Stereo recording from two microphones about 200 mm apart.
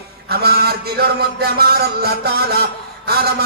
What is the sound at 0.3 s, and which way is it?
A man's voice, 50° right (ahead or behind).